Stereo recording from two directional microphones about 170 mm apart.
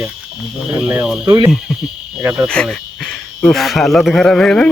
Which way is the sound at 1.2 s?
25° right (ahead or behind).